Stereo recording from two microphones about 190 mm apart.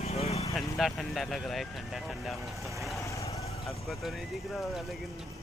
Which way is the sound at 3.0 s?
15° left (ahead or behind).